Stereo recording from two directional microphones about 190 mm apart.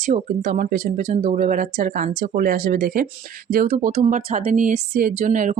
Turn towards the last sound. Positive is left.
turn(degrees=-40)  # may be behind; listen again after turning